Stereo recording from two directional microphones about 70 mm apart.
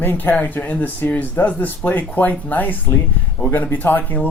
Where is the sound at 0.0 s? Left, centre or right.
Left.